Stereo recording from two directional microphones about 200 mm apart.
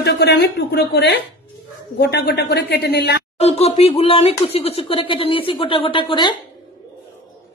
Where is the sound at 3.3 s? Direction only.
30° left (ahead or behind).